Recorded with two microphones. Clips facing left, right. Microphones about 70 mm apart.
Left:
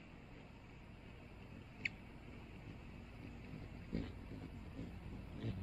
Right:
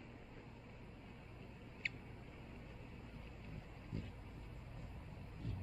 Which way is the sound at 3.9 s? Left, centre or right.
Left.